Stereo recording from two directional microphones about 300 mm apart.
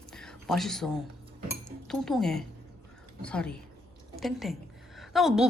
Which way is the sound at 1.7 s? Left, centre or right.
Centre.